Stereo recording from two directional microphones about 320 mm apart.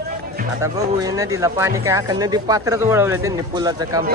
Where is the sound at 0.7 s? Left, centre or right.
Centre.